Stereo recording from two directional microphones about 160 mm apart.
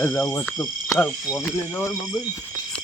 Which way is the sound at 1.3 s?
15° left (ahead or behind).